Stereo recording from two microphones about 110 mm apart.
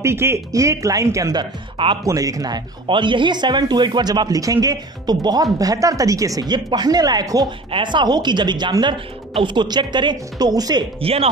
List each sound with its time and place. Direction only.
0.0 s speech: 25° right (ahead or behind)
1.4 s a woman's voice: 50° right (ahead or behind)
2.0 s a woman's voice: 30° right (ahead or behind)
11.0 s speech: 60° right (ahead or behind)